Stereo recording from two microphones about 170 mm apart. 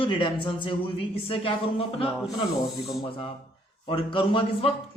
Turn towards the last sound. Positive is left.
turn(degrees=30)  # may be behind; listen again after turning